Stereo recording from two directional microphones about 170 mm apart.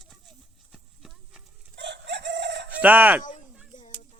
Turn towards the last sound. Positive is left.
turn(degrees=-10)  # may be behind; listen again after turning